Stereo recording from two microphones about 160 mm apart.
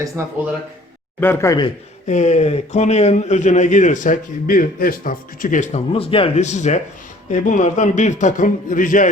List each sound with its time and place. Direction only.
0.2 s speech: 15° right (ahead or behind)
1.2 s speech: 15° left (ahead or behind)
2.0 s a man's voice: 45° left (ahead or behind)
5.9 s a man's voice: 35° left (ahead or behind); by 9.0 s 55° left (ahead or behind)